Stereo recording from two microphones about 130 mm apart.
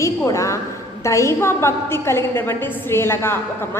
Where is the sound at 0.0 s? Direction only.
25° left (ahead or behind).